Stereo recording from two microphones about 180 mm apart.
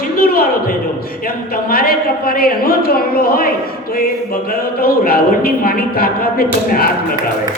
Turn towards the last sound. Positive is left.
turn(degrees=55)  # may be behind; listen again after turning